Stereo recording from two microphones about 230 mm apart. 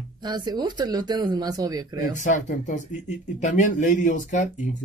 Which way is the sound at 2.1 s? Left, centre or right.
Left.